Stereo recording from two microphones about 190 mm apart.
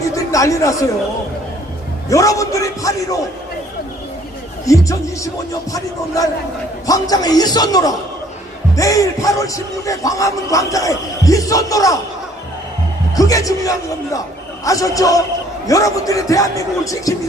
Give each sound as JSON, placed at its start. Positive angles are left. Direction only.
{"t": 0.1, "sound": "a sound", "side_deg": 15}
{"t": 2.0, "sound": "speech", "side_deg": 15}
{"t": 4.6, "sound": "a man's voice", "side_deg": 15}
{"t": 6.8, "sound": "a man's voice", "side_deg": 20}
{"t": 13.1, "sound": "speech", "side_deg": 20}